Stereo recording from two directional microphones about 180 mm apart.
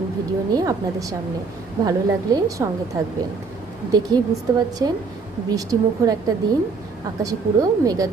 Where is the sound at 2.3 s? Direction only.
20° right (ahead or behind).